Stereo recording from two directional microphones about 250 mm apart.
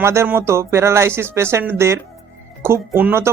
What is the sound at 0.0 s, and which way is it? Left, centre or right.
Speech, centre.